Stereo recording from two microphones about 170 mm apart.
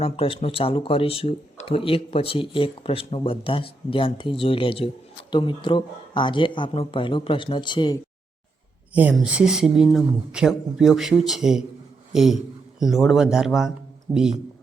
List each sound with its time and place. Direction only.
0.0 s speech: 35° left (ahead or behind)
8.9 s speech: 10° right (ahead or behind)